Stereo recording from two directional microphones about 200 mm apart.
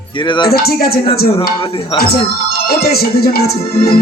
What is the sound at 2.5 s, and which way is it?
Speech, 50° left (ahead or behind).